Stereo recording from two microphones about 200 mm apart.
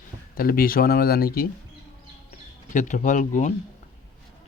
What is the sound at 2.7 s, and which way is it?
Speech, 40° left (ahead or behind).